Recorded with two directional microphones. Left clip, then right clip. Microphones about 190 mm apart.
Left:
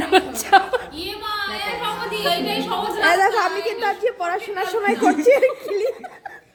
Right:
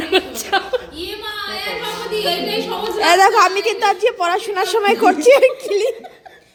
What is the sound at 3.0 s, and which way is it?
A woman's voice, 15° right (ahead or behind).